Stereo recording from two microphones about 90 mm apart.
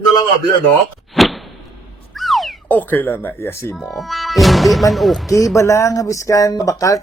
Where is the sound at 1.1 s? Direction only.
Centre (ahead or behind).